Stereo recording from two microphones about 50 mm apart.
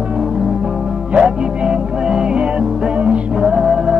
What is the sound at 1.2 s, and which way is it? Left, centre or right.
Music, centre.